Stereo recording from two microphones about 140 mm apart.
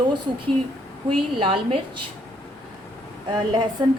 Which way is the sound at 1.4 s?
40° right (ahead or behind).